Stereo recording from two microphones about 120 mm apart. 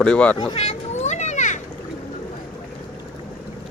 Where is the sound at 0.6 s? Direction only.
70° left (ahead or behind); by 1.6 s 90° left.